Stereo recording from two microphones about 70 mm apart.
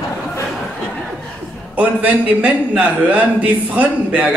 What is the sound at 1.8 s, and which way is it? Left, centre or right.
A man's voice, right.